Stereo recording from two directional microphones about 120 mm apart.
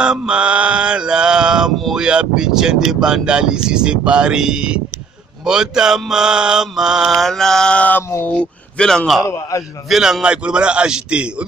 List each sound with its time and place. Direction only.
0.0 s mantra: 5° right (ahead or behind); by 8.0 s 10° left (ahead or behind)
8.3 s speech: 10° left (ahead or behind)
9.2 s a man's voice: 25° left (ahead or behind)
9.8 s mantra: centre (ahead or behind)